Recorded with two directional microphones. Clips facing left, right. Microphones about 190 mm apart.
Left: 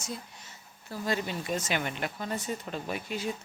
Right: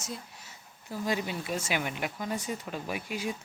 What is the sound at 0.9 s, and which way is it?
Speech, 15° right (ahead or behind).